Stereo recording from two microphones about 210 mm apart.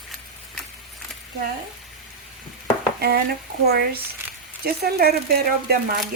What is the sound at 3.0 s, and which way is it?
Dishes, 50° right (ahead or behind).